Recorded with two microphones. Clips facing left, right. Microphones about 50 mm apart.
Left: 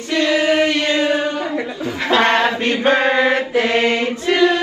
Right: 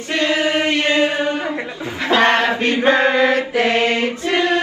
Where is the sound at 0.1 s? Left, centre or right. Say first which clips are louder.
Left 2 dB; right.